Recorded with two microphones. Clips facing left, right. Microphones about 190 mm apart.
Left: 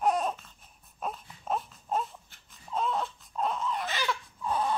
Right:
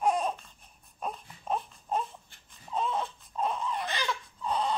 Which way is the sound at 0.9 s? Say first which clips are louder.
Even; centre (ahead or behind).